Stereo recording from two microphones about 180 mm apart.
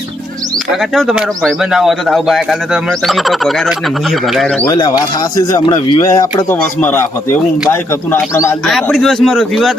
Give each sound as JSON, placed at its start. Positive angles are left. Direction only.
{"t": 0.7, "sound": "a man's voice", "side_deg": 0}
{"t": 4.6, "sound": "speech", "side_deg": 20}
{"t": 8.6, "sound": "a man's voice", "side_deg": 0}